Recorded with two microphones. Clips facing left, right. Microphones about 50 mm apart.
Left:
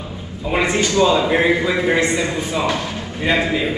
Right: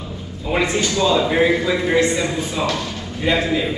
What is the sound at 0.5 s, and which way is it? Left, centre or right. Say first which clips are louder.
Mantra: left 1 dB; centre.